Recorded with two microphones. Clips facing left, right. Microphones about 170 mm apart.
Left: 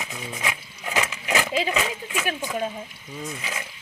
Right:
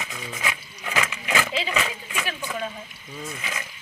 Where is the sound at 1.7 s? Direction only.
15° left (ahead or behind).